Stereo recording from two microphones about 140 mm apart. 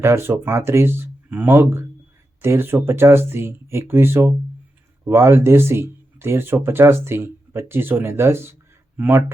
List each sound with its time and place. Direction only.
0.0 s speech: 20° right (ahead or behind)